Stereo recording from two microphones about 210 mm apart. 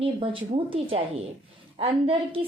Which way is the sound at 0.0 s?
25° right (ahead or behind).